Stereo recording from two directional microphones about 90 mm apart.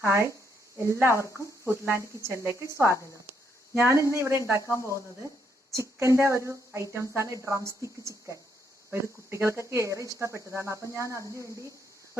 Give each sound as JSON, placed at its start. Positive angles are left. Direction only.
{"t": 0.0, "sound": "speech", "side_deg": -30}
{"t": 4.6, "sound": "speech", "side_deg": 35}
{"t": 5.7, "sound": "speech", "side_deg": -35}